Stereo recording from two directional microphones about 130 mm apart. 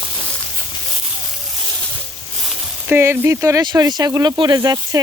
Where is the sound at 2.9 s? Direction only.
20° right (ahead or behind).